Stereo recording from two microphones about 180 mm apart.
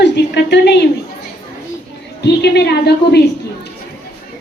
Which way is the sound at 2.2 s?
70° left (ahead or behind).